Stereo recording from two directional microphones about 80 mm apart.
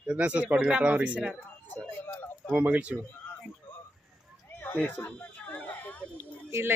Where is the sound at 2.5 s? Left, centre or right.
Right.